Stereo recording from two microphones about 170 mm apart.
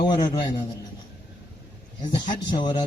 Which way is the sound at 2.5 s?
25° left (ahead or behind).